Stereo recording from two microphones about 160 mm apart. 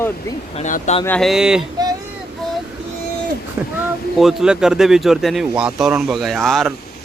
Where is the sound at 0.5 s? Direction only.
45° left (ahead or behind).